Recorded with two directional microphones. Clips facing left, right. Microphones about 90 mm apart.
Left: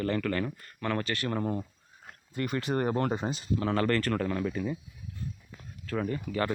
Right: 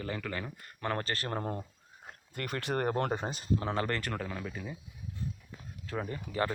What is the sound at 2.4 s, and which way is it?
Speech, 60° right (ahead or behind).